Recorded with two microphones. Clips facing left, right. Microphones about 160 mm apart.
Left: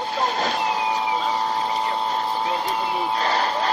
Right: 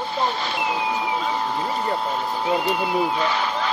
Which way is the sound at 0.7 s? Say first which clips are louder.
Left 1 dB; centre (ahead or behind).